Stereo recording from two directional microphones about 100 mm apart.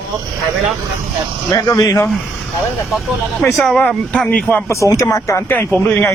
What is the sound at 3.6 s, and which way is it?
Speech, 5° left (ahead or behind).